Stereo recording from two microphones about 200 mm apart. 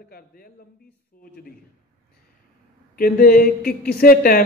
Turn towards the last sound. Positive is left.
turn(degrees=45)  # may be behind; listen again after turning